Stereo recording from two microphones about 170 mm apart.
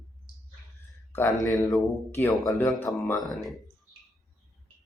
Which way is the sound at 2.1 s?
15° left (ahead or behind).